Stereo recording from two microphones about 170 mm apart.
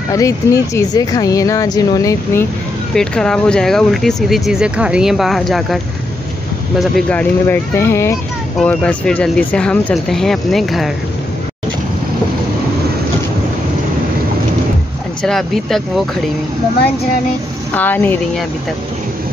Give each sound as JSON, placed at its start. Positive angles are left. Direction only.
{"t": 0.1, "sound": "speech", "side_deg": 20}
{"t": 2.9, "sound": "speech", "side_deg": 5}
{"t": 6.8, "sound": "speech", "side_deg": 5}
{"t": 15.2, "sound": "speech", "side_deg": 0}
{"t": 17.7, "sound": "speech", "side_deg": 10}